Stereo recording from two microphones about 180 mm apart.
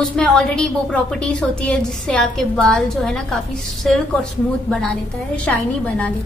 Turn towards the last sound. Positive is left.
turn(degrees=5)  # may be behind; listen again after turning